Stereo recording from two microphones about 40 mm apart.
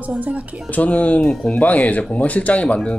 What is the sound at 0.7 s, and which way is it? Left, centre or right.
Speech, left.